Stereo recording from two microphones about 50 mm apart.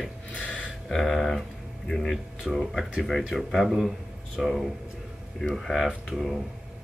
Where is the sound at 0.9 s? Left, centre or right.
Centre.